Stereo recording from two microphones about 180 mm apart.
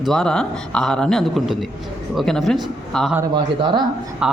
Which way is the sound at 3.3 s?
25° right (ahead or behind).